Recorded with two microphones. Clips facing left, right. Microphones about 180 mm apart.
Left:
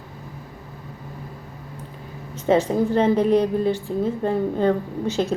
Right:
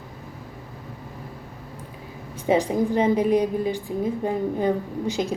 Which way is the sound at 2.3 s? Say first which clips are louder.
Left 2 dB; 10° right (ahead or behind).